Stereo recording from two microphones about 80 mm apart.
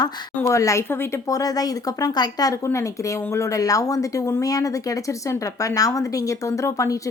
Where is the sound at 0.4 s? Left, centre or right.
Left.